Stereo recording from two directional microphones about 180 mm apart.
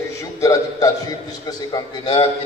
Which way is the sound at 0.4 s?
20° left (ahead or behind).